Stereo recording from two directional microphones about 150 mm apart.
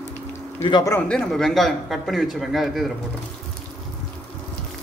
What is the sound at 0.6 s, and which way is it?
Speech, 30° left (ahead or behind).